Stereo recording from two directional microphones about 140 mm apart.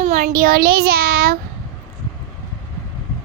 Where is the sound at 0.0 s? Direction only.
60° right (ahead or behind); by 1.4 s 90° right.